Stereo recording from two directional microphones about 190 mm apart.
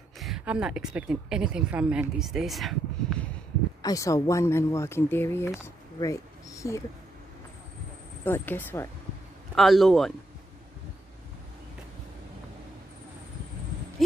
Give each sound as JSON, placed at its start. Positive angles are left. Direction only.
{"t": 0.2, "sound": "a woman's voice", "side_deg": -5}
{"t": 3.8, "sound": "speech", "side_deg": 15}
{"t": 8.2, "sound": "speech", "side_deg": 10}
{"t": 9.6, "sound": "a woman's voice", "side_deg": 0}